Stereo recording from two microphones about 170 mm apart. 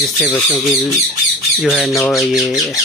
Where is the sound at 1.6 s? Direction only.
Centre (ahead or behind).